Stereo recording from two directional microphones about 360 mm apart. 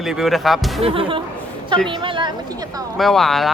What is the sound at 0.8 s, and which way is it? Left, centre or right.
Speech, centre.